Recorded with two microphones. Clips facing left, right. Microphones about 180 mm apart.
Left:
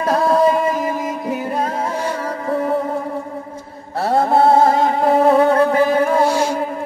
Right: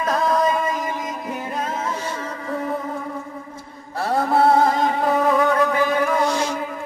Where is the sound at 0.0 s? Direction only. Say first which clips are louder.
Left 5 dB; 30° left (ahead or behind).